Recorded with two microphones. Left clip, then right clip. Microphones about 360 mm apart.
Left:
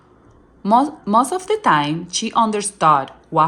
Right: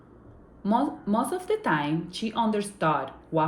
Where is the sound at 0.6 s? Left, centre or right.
Centre.